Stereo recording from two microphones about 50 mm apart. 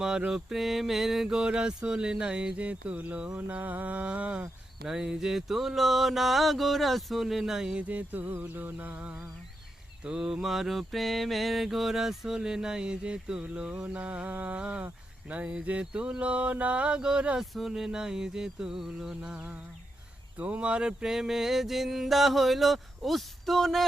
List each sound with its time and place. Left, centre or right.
0.3 s mantra: centre
4.8 s mantra: centre
7.9 s a sound: right
8.3 s a sound: right
10.0 s mantra: centre
10.4 s mantra: centre
13.8 s mantra: right; by 17.2 s centre
17.4 s mantra: centre
17.7 s mantra: centre
21.0 s mantra: centre